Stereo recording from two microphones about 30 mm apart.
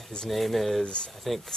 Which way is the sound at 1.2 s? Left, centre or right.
Centre.